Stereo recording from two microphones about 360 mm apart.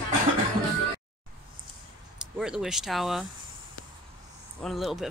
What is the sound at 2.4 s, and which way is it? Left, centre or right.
Speech, centre.